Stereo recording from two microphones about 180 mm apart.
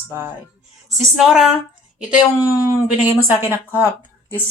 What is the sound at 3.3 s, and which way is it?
Speech, 15° right (ahead or behind).